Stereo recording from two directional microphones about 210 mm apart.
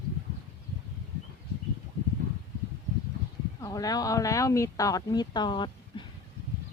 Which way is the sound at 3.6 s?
15° left (ahead or behind).